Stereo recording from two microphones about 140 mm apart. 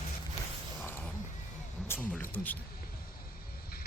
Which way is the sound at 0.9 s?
15° left (ahead or behind).